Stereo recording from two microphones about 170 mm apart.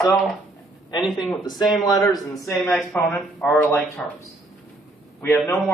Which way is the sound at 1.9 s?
20° left (ahead or behind).